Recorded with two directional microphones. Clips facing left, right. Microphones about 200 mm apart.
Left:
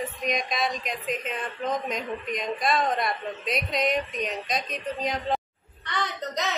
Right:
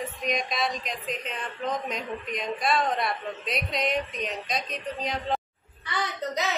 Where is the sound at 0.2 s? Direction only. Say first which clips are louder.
Even; centre (ahead or behind).